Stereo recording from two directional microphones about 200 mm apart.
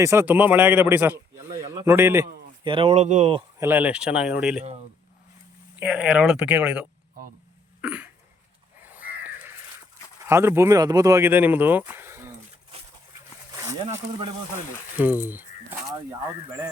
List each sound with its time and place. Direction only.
0.0 s a man's voice: 10° right (ahead or behind)
2.6 s speech: 25° right (ahead or behind)
3.6 s speech: 10° right (ahead or behind)
5.8 s speech: 5° right (ahead or behind)
7.8 s cough: 5° right (ahead or behind)
8.8 s crow: 10° right (ahead or behind)
10.2 s speech: 15° right (ahead or behind)
14.9 s speech: 10° right (ahead or behind)